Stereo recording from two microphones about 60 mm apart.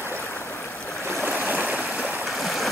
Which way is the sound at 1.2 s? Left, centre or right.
Right.